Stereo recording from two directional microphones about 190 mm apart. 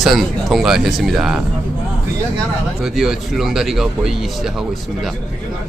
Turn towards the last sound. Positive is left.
turn(degrees=0)  # may be behind; listen again after turning